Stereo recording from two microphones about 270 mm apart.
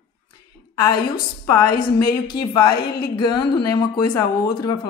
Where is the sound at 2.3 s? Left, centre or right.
Centre.